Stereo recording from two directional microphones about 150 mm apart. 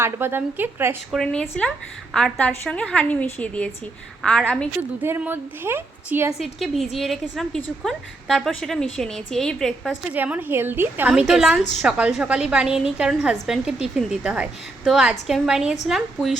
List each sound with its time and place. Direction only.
0.0 s a woman's voice: 15° right (ahead or behind)
1.1 s a woman's voice: 5° left (ahead or behind)
5.0 s a woman's voice: 15° right (ahead or behind)
6.4 s a woman's voice: centre (ahead or behind)
10.1 s a woman's voice: 10° right (ahead or behind)